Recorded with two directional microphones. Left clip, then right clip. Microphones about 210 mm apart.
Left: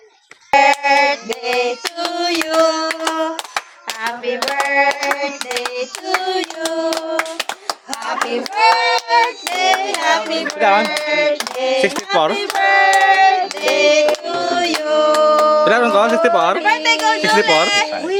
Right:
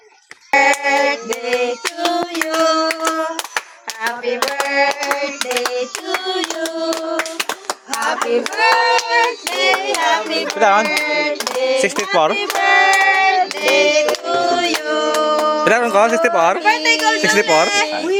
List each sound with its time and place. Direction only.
0.5 s music: 20° left (ahead or behind)
2.0 s a sound: 20° left (ahead or behind)
4.0 s hands: 5° left (ahead or behind)
9.0 s hands: 20° left (ahead or behind)
10.6 s speech: 10° right (ahead or behind)
10.9 s hands: 20° left (ahead or behind)
11.8 s speech: 5° right (ahead or behind)
12.4 s music: 15° left (ahead or behind)
15.6 s speech: 10° right (ahead or behind)
16.6 s speech: 5° left (ahead or behind)